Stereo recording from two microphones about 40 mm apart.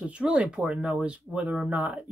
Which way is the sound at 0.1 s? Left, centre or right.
Right.